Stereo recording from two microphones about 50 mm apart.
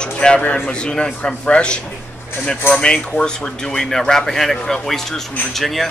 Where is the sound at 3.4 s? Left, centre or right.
Centre.